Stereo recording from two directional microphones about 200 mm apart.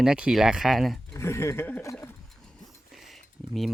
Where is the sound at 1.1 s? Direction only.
15° left (ahead or behind).